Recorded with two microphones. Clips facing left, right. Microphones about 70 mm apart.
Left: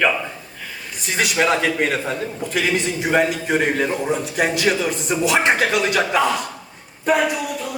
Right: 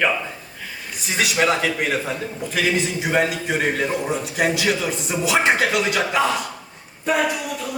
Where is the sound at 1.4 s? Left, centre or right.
Centre.